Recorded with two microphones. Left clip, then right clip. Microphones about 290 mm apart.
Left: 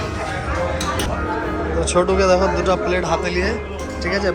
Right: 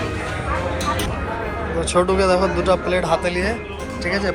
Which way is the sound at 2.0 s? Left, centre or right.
Centre.